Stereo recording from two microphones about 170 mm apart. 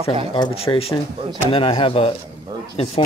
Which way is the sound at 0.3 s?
30° left (ahead or behind).